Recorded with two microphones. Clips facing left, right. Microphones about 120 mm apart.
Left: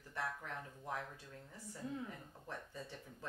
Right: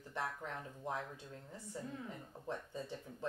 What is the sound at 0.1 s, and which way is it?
Speech, 25° right (ahead or behind).